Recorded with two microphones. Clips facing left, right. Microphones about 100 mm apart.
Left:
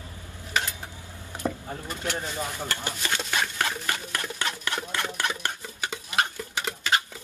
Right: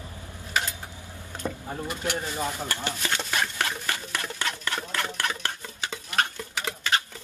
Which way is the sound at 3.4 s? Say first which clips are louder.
Left 1 dB; 10° left (ahead or behind).